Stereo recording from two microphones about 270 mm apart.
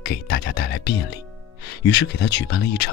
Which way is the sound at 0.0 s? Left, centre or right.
Left.